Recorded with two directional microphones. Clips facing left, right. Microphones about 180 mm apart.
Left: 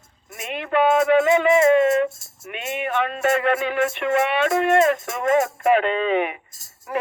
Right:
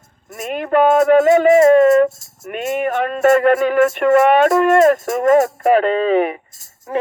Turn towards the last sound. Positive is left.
turn(degrees=-35)  # may be behind; listen again after turning